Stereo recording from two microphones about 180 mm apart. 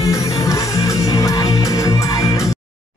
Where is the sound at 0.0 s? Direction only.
20° left (ahead or behind).